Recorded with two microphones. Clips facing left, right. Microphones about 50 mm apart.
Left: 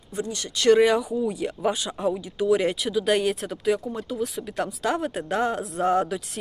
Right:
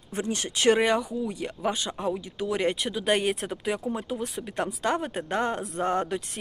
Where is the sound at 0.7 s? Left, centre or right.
Centre.